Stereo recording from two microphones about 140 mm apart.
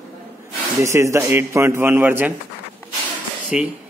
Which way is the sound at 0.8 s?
20° right (ahead or behind).